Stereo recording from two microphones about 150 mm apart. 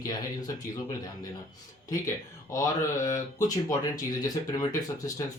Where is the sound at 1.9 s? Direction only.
20° left (ahead or behind).